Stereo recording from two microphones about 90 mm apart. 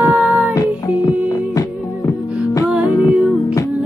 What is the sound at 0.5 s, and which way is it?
Music, 45° left (ahead or behind).